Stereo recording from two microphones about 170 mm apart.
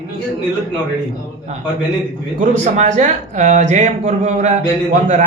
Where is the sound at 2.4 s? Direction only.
45° right (ahead or behind).